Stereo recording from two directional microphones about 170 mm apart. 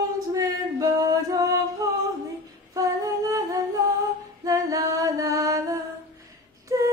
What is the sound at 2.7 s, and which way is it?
Music, 20° right (ahead or behind).